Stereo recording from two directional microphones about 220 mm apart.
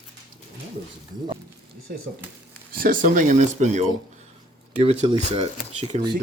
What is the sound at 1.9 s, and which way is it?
Speech, 45° right (ahead or behind).